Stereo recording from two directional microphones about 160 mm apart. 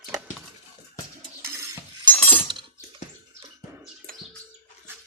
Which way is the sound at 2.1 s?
10° left (ahead or behind).